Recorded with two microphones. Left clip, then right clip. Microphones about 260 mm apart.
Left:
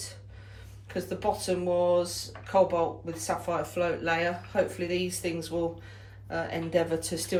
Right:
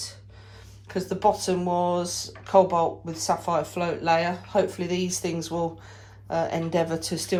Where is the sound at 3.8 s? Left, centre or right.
Centre.